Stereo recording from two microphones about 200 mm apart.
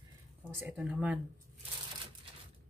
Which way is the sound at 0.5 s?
10° right (ahead or behind).